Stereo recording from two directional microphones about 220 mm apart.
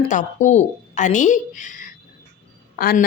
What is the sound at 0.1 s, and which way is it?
A woman's voice, 35° left (ahead or behind).